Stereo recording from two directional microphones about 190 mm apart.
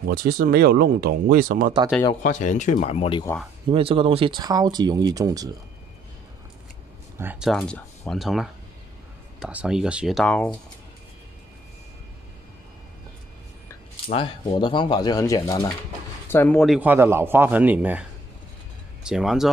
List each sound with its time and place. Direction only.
0.0 s speech: 50° right (ahead or behind)
2.2 s speech: 40° left (ahead or behind)
3.7 s speech: 30° right (ahead or behind)
7.2 s speech: 5° right (ahead or behind)
14.1 s speech: 30° left (ahead or behind); by 18.0 s 10° right (ahead or behind)
19.0 s speech: 5° right (ahead or behind)